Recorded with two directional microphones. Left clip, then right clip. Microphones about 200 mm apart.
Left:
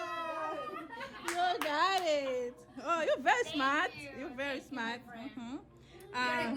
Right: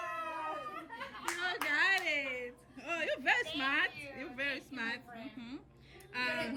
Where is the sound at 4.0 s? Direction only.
5° left (ahead or behind).